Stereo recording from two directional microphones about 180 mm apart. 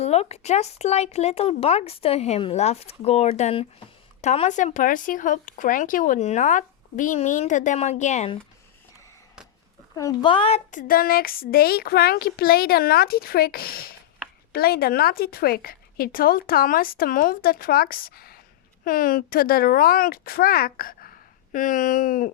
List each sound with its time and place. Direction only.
0.0 s speech: 35° left (ahead or behind)
9.9 s speech: 20° left (ahead or behind); by 22.3 s 50° left (ahead or behind)